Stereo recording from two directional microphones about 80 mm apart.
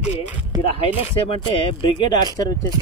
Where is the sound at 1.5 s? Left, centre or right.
Left.